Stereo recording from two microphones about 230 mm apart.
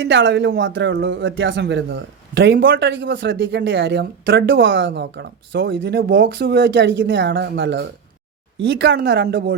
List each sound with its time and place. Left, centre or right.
0.0 s a man's voice: right